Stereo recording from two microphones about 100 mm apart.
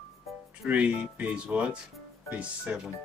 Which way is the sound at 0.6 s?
15° right (ahead or behind).